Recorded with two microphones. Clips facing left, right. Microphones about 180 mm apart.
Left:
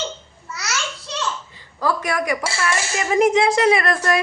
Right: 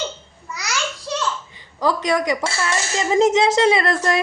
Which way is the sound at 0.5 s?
15° right (ahead or behind).